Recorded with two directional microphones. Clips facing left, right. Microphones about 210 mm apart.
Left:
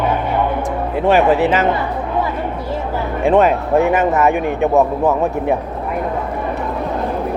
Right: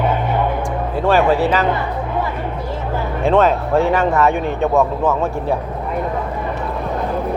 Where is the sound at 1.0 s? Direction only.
20° left (ahead or behind).